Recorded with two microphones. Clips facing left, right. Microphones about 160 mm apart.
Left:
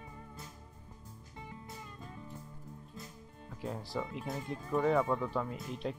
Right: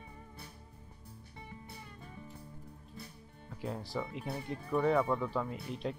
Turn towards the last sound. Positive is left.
turn(degrees=0)  # may be behind; listen again after turning